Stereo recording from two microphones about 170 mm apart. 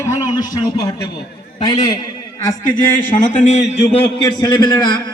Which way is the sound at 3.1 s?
50° left (ahead or behind).